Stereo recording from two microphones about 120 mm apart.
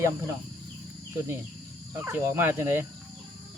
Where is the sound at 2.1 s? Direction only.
20° right (ahead or behind).